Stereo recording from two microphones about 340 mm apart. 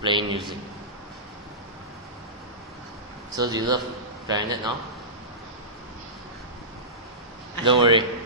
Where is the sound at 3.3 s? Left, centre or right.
Centre.